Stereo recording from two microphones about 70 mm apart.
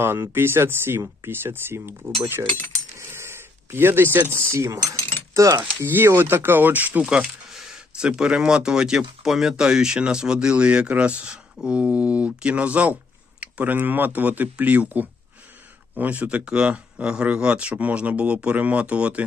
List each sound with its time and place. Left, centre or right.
0.0 s speech: right
3.1 s cutlery: right
5.3 s speech: right
5.8 s speech: right
7.0 s speech: centre